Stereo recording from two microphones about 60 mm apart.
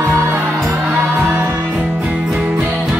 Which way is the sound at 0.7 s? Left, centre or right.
Right.